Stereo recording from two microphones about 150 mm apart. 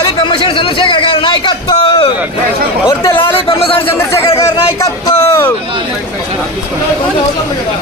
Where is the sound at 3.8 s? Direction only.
15° left (ahead or behind).